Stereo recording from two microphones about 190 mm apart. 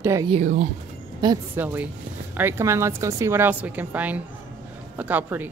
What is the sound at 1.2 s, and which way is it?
Speech, 25° right (ahead or behind).